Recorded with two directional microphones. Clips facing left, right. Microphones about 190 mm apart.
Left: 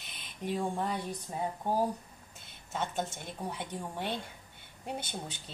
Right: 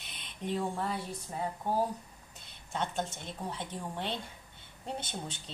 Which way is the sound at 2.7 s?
5° left (ahead or behind).